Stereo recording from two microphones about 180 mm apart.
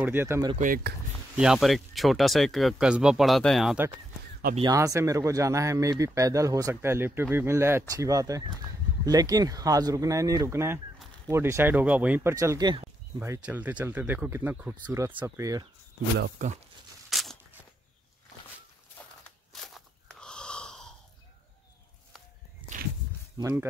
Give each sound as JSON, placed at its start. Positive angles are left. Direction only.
{"t": 0.0, "sound": "speech", "side_deg": -10}
{"t": 0.6, "sound": "speech", "side_deg": -50}
{"t": 1.3, "sound": "speech", "side_deg": -5}
{"t": 4.6, "sound": "speech", "side_deg": -20}
{"t": 13.2, "sound": "speech", "side_deg": -10}
{"t": 16.4, "sound": "speech", "side_deg": -45}
{"t": 17.1, "sound": "tearing", "side_deg": 0}
{"t": 19.5, "sound": "a sound", "side_deg": 0}
{"t": 22.6, "sound": "walk", "side_deg": -30}
{"t": 23.3, "sound": "speech", "side_deg": -15}